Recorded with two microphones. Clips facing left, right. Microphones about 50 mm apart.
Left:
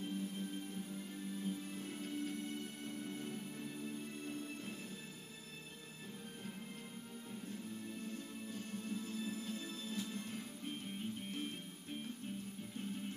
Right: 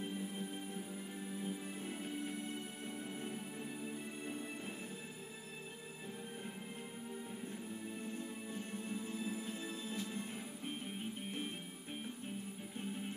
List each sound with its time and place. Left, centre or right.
0.0 s music: centre
7.4 s music: centre